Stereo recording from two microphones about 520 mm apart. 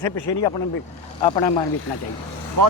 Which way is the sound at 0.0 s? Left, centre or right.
Left.